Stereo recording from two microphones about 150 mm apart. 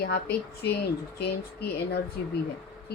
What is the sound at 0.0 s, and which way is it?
Speech, 90° left.